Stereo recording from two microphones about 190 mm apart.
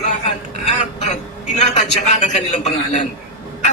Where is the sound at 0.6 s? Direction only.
35° left (ahead or behind).